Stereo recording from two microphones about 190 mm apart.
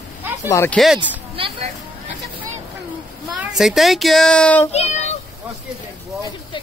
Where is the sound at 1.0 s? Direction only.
25° right (ahead or behind).